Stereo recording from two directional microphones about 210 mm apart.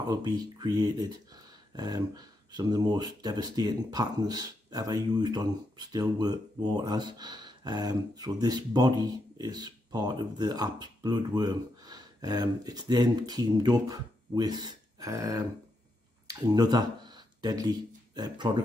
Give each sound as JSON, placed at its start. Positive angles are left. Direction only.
{"t": 0.0, "sound": "speech", "side_deg": -20}